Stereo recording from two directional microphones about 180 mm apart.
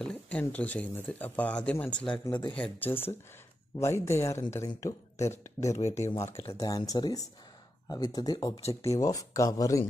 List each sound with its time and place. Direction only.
0.0 s speech: 5° left (ahead or behind)